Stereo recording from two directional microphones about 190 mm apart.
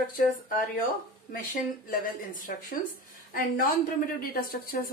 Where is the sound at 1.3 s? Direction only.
45° left (ahead or behind).